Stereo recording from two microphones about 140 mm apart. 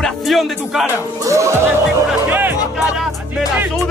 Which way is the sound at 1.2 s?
20° right (ahead or behind).